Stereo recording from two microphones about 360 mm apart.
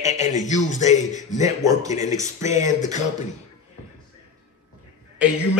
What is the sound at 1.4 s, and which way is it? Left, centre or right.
A man's voice, centre.